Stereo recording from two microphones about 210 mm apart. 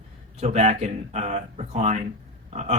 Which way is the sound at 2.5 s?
30° right (ahead or behind).